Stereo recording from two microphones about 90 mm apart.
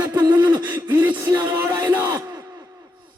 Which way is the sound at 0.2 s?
45° right (ahead or behind).